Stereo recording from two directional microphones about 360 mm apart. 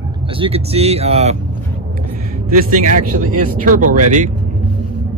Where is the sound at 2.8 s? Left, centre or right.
Right.